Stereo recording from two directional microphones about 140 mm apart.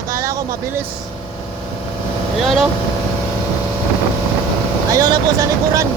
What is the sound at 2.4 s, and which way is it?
Speech, centre (ahead or behind).